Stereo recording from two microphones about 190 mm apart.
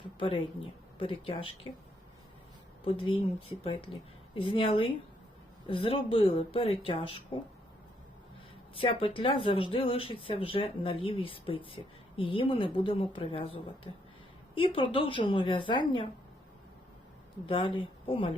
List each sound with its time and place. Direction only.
0.2 s speech: 25° left (ahead or behind)
2.8 s speech: 30° left (ahead or behind)
8.7 s speech: 30° left (ahead or behind)
17.4 s speech: 25° left (ahead or behind)